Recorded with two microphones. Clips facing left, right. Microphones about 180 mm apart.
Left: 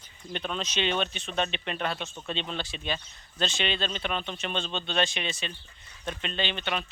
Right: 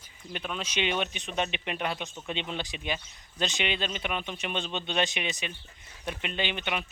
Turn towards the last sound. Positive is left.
turn(degrees=-15)  # may be behind; listen again after turning